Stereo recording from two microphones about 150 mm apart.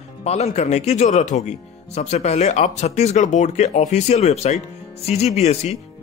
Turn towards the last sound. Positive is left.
turn(degrees=45)  # may be behind; listen again after turning